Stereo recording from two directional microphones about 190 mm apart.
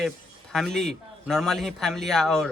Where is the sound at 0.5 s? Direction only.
Centre (ahead or behind).